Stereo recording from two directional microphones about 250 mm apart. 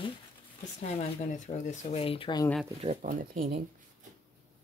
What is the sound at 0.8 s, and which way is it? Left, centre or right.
Speech, left.